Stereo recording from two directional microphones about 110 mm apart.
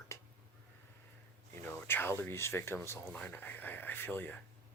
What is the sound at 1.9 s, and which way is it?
Speech, 20° left (ahead or behind).